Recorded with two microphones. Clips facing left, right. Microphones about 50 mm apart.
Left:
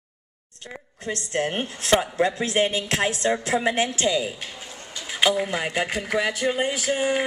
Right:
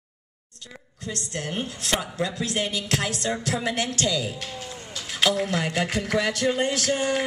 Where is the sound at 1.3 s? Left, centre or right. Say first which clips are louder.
Left 6 dB; left.